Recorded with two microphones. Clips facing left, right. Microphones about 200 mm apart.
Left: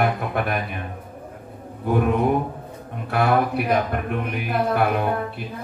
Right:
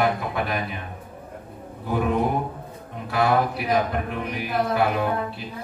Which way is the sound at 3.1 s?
60° left (ahead or behind).